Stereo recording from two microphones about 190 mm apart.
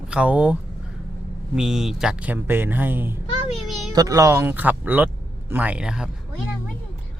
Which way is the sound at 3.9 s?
15° right (ahead or behind).